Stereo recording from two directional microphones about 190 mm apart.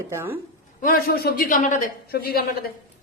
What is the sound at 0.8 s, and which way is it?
A man's voice, 50° left (ahead or behind).